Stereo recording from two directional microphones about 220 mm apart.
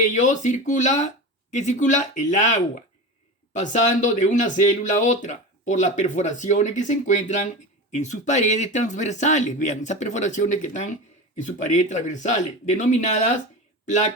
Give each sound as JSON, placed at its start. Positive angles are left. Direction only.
{"t": 0.0, "sound": "speech", "side_deg": 35}